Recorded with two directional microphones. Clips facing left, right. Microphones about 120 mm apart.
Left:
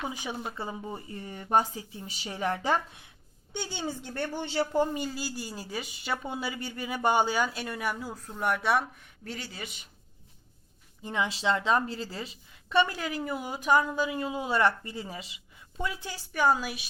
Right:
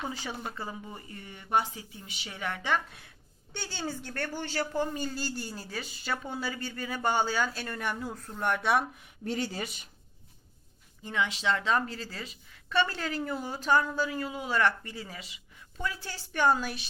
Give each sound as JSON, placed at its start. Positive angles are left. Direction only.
{"t": 0.0, "sound": "a woman's voice", "side_deg": 15}
{"t": 1.1, "sound": "speech", "side_deg": 40}
{"t": 3.5, "sound": "a woman's voice", "side_deg": 15}
{"t": 5.0, "sound": "a woman's voice", "side_deg": 5}
{"t": 9.2, "sound": "speech", "side_deg": -25}
{"t": 9.5, "sound": "speech", "side_deg": -40}
{"t": 11.0, "sound": "a woman's voice", "side_deg": 25}